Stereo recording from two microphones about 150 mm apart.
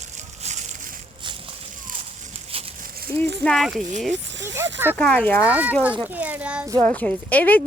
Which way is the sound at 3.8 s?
55° right (ahead or behind).